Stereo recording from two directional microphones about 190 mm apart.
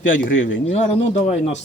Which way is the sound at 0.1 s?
90° left.